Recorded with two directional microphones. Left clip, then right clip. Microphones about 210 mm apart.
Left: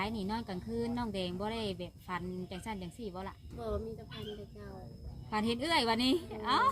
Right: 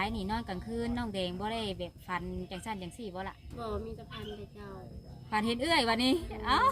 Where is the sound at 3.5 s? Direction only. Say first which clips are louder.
Even; 15° right (ahead or behind).